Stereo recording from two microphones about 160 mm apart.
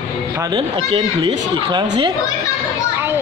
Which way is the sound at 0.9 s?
30° right (ahead or behind).